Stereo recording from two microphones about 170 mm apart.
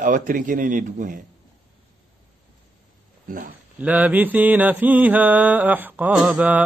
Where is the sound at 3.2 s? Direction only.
55° right (ahead or behind).